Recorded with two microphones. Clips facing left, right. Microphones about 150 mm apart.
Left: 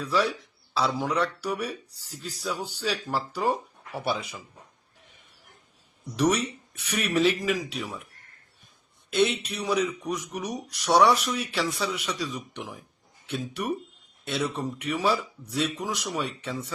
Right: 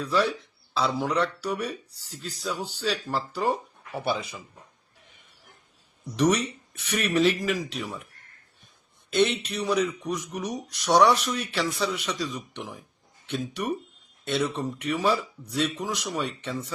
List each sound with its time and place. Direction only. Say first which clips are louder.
0.1 s speech: right 1 dB; 10° left (ahead or behind)
6.3 s speech: right 1 dB; 10° left (ahead or behind)
9.0 s speech: right 1 dB; 10° left (ahead or behind)